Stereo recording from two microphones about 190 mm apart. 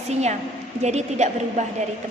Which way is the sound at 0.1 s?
35° right (ahead or behind).